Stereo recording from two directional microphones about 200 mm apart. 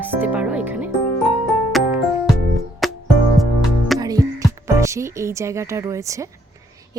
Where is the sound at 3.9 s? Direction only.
15° right (ahead or behind).